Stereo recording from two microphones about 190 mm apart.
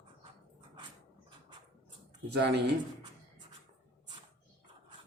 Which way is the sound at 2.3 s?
60° right (ahead or behind).